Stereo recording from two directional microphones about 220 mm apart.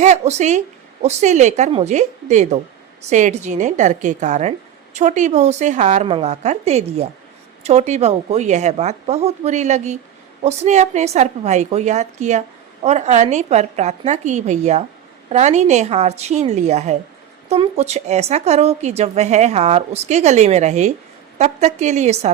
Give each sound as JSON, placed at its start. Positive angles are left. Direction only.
{"t": 0.0, "sound": "a woman's voice", "side_deg": -30}